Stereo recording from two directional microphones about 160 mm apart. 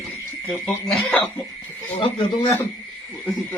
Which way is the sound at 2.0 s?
35° left (ahead or behind).